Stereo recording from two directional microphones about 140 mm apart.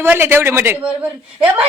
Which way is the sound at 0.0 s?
15° right (ahead or behind).